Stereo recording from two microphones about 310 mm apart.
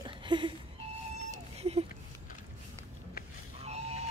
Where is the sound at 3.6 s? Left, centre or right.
Right.